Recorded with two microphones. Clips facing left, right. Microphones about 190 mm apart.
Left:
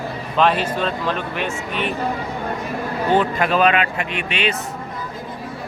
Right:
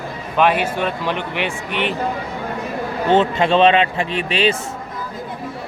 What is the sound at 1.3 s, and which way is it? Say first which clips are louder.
Speech: right 1 dB; 75° right (ahead or behind).